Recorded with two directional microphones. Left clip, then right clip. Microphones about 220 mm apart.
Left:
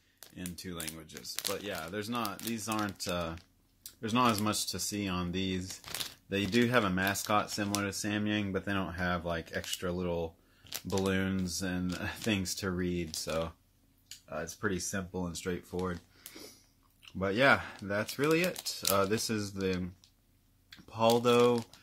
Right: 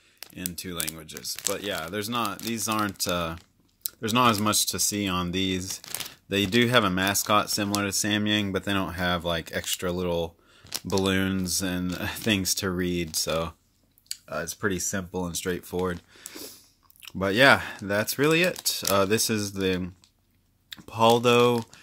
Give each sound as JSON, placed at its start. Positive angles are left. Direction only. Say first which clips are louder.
{"t": 0.4, "sound": "speech", "louder": "right 8 dB", "side_deg": -35}
{"t": 1.2, "sound": "speech", "louder": "right 10 dB", "side_deg": -25}
{"t": 1.5, "sound": "speech", "louder": "right 8 dB", "side_deg": -40}